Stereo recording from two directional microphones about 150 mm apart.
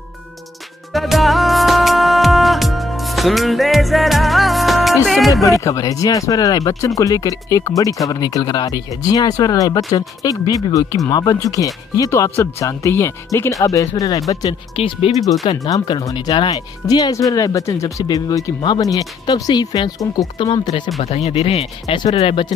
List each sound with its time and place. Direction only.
0.9 s music: centre (ahead or behind)
5.3 s speech: 20° left (ahead or behind)
14.8 s speech: 40° left (ahead or behind)
15.6 s speech: 25° left (ahead or behind)
21.0 s speech: 45° left (ahead or behind)